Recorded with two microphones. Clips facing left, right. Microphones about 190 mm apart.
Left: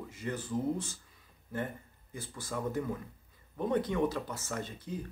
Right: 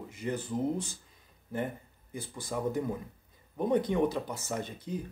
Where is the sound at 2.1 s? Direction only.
15° right (ahead or behind).